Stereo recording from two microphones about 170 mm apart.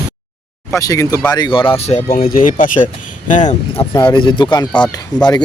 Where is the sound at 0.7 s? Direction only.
20° left (ahead or behind).